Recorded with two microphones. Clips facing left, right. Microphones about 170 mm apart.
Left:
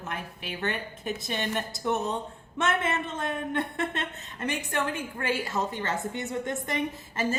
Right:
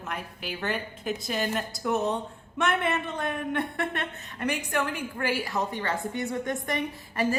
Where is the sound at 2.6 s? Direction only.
20° left (ahead or behind).